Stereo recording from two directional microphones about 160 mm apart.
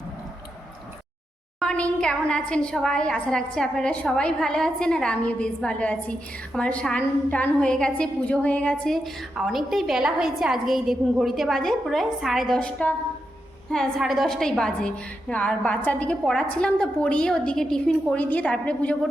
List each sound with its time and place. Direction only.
1.5 s a woman's voice: 5° left (ahead or behind)